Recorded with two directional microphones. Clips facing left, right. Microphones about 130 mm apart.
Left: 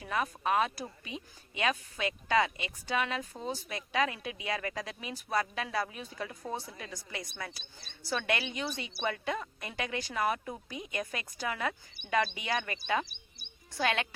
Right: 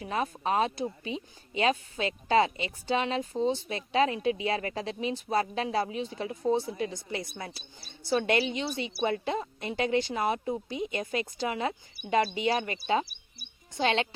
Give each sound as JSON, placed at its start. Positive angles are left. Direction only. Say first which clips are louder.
{"t": 0.0, "sound": "a woman's voice", "louder": "right 2 dB", "side_deg": -30}